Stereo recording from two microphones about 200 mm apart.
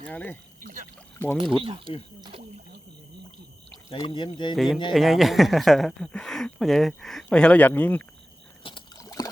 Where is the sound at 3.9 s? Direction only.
25° left (ahead or behind).